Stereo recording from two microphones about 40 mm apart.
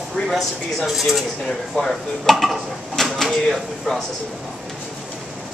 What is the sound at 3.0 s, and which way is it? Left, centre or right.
Speech, centre.